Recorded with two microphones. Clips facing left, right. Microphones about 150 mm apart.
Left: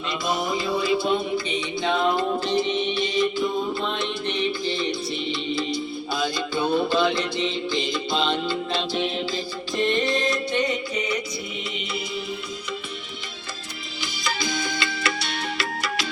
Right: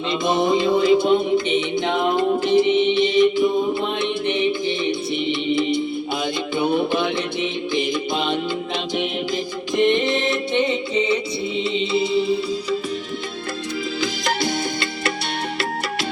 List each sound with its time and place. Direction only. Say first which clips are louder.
0.3 s music: right 7 dB; 25° right (ahead or behind)
14.3 s music: right 2 dB; 60° right (ahead or behind)